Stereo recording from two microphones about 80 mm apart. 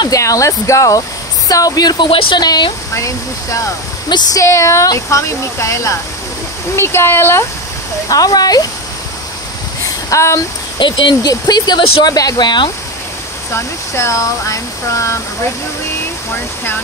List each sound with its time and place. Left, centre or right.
0.2 s speech: left
2.9 s speech: left
8.1 s speech: left
10.0 s a sound: left
10.8 s speech: left
11.2 s speech: left
13.5 s speech: left